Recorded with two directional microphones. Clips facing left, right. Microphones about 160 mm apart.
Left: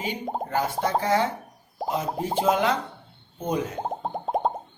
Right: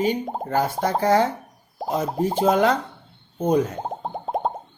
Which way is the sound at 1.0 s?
40° right (ahead or behind).